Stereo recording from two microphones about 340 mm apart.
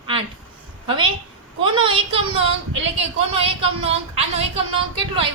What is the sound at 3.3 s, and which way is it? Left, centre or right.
Speech, centre.